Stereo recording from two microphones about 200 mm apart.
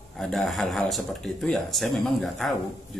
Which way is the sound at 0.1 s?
Centre (ahead or behind).